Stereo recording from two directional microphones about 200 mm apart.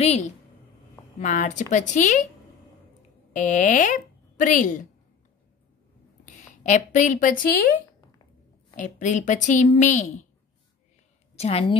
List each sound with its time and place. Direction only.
0.0 s a woman's voice: 35° left (ahead or behind)
3.3 s a woman's voice: 40° left (ahead or behind)
6.2 s a woman's voice: 40° left (ahead or behind)
8.7 s a woman's voice: 40° left (ahead or behind)
11.3 s a woman's voice: 30° left (ahead or behind)